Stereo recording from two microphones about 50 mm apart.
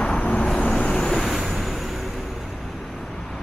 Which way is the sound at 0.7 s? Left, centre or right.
Centre.